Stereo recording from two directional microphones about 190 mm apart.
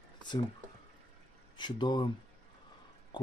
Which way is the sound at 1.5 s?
25° left (ahead or behind).